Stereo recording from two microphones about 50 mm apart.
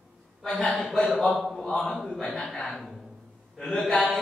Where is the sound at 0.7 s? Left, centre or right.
Centre.